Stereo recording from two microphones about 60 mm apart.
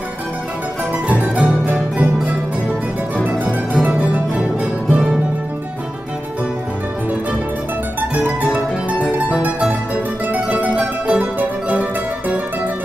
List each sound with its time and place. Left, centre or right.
1.0 s music: right
3.3 s harpsichord: centre
4.8 s music: centre
8.1 s music: right
10.3 s mandolin: right